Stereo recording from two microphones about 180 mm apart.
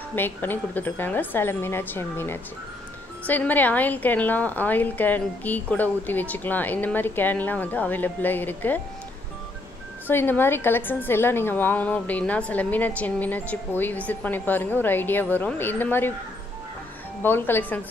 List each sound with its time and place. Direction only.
0.1 s a woman's voice: 10° left (ahead or behind)
10.0 s a woman's voice: 10° left (ahead or behind)
17.2 s a woman's voice: 10° left (ahead or behind)